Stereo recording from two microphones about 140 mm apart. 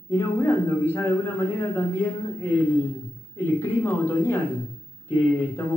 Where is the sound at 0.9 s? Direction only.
20° left (ahead or behind).